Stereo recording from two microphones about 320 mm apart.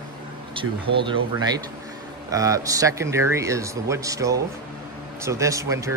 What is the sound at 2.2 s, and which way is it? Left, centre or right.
Speech, centre.